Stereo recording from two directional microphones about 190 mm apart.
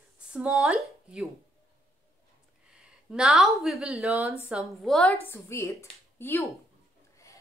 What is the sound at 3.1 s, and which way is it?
A woman's voice, 5° right (ahead or behind).